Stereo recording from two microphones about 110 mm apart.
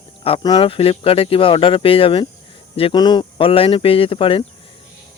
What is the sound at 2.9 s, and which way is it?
Speech, 40° left (ahead or behind).